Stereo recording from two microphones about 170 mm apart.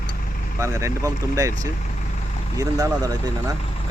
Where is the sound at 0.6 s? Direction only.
15° right (ahead or behind).